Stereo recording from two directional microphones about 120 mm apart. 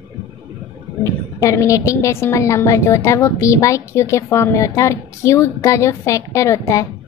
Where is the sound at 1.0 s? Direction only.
25° left (ahead or behind).